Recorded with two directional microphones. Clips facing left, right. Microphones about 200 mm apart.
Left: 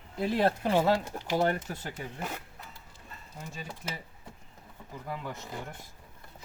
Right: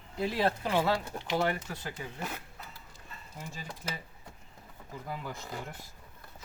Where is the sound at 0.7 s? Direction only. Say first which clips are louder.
Left 4 dB; 20° left (ahead or behind).